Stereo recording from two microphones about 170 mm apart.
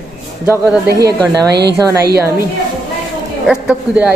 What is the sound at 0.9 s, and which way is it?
A woman's voice, 20° right (ahead or behind).